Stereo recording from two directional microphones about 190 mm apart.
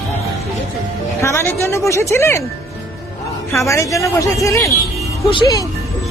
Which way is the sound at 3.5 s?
15° left (ahead or behind).